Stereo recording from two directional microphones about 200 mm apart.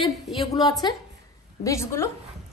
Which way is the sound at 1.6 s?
15° left (ahead or behind).